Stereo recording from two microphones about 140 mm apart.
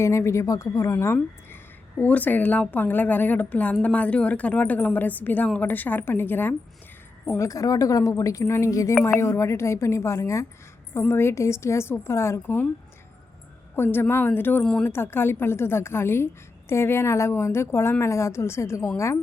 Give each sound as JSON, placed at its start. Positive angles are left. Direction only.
{"t": 0.0, "sound": "a woman's voice", "side_deg": 20}
{"t": 13.7, "sound": "a woman's voice", "side_deg": 15}